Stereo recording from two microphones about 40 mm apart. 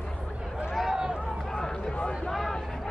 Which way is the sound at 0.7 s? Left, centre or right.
Centre.